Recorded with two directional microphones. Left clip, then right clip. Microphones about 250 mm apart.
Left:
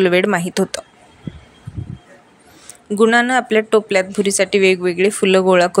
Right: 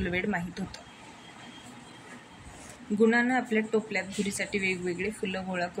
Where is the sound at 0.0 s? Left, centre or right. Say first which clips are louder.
Left 17 dB; left.